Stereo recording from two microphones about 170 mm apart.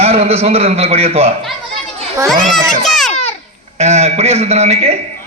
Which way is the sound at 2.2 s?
Centre (ahead or behind).